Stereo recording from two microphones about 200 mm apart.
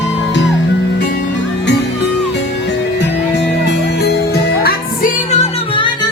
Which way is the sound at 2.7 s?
60° left (ahead or behind).